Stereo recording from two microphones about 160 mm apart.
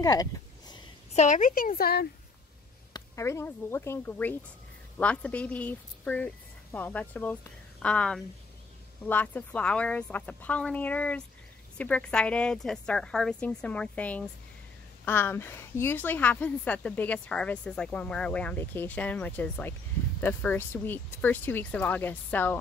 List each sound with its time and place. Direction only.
0.0 s a sound: 25° left (ahead or behind)
1.1 s a woman's voice: 50° left (ahead or behind); by 2.0 s 70° left (ahead or behind)
2.9 s a woman's voice: 20° left (ahead or behind)